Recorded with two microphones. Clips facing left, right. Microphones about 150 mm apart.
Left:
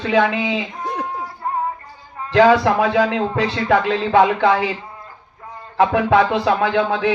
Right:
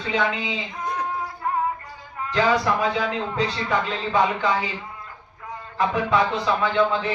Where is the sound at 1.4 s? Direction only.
30° left (ahead or behind).